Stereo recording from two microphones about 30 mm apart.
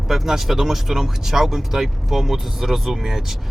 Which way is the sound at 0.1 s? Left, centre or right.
Centre.